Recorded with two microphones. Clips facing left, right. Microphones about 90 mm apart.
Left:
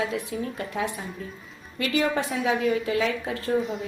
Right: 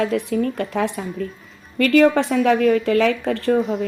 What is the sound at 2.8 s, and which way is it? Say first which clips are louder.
Speech: right 8 dB; 70° right (ahead or behind).